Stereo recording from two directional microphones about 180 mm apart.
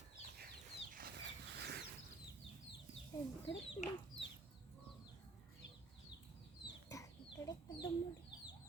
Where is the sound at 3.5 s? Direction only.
80° left.